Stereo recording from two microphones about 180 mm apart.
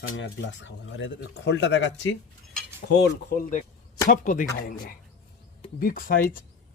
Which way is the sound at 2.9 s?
50° left (ahead or behind).